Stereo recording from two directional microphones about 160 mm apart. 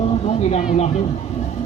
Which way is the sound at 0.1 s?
40° left (ahead or behind).